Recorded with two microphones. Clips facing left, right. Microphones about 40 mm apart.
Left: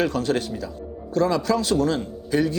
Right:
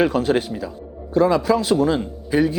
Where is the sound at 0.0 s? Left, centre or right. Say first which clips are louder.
Right 4 dB; centre.